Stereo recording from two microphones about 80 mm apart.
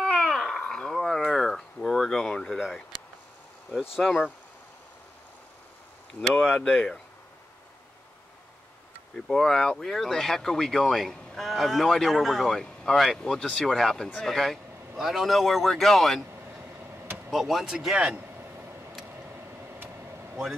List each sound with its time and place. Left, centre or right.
0.0 s a sound: centre
4.0 s speech: centre
6.3 s speech: centre
9.1 s speech: centre
17.3 s speech: centre
18.4 s a sound: right
19.0 s vehicle: right